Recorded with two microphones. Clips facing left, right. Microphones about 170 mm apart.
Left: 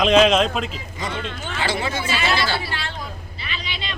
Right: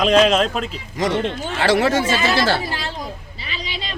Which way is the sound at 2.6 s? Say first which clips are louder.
Right 3 dB; 40° right (ahead or behind).